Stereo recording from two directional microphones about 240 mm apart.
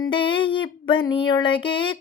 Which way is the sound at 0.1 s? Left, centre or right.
Left.